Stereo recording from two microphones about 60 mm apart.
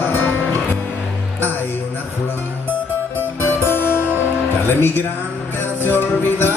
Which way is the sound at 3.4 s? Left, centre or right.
Left.